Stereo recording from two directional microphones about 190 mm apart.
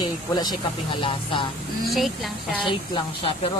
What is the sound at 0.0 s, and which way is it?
Speech, 20° left (ahead or behind).